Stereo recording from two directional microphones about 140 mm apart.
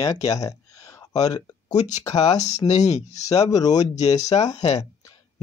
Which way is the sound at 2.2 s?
55° left (ahead or behind).